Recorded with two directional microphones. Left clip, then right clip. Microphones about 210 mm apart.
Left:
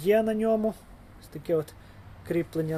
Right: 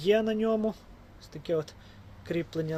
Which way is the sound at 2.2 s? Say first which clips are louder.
Left 3 dB; centre (ahead or behind).